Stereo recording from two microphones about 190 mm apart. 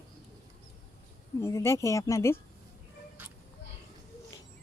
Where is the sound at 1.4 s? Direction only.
15° left (ahead or behind).